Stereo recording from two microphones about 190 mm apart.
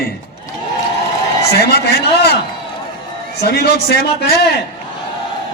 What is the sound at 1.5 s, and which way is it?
Speech, 55° left (ahead or behind).